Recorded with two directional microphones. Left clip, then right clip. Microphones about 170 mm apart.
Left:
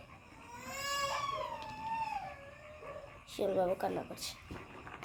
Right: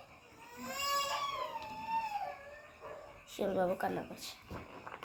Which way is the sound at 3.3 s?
10° left (ahead or behind).